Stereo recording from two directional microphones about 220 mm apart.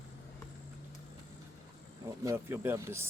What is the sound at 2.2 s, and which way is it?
Speech, 10° right (ahead or behind).